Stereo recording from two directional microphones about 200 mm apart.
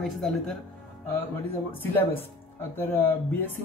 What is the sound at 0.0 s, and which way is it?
Speech, centre (ahead or behind).